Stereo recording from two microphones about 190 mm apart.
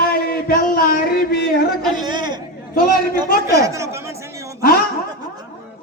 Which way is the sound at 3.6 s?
15° right (ahead or behind).